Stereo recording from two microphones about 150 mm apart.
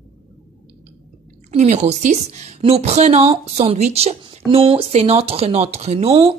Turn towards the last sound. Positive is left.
turn(degrees=-35)  # may be behind; listen again after turning